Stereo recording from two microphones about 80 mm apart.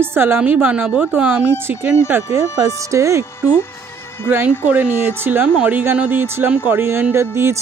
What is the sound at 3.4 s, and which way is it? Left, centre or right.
Speech, left.